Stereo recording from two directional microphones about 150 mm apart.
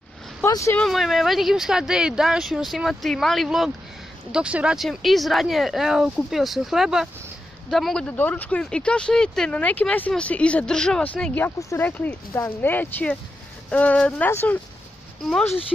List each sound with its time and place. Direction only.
0.5 s speech: 20° left (ahead or behind)
0.7 s speech: centre (ahead or behind)